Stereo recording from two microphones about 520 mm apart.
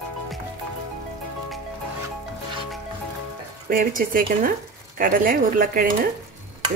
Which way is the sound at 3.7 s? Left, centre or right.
Centre.